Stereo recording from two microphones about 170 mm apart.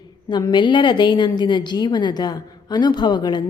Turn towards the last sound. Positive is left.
turn(degrees=25)  # may be behind; listen again after turning